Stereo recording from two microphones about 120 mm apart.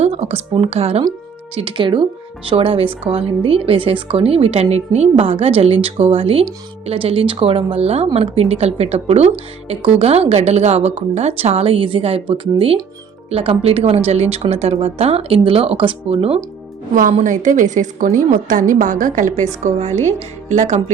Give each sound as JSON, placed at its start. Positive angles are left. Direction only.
{"t": 0.0, "sound": "speech", "side_deg": -60}
{"t": 1.5, "sound": "a woman's voice", "side_deg": -45}
{"t": 16.9, "sound": "a woman's voice", "side_deg": -90}
{"t": 19.6, "sound": "a woman's voice", "side_deg": -70}